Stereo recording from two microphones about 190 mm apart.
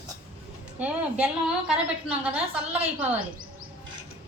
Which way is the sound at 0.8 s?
5° right (ahead or behind).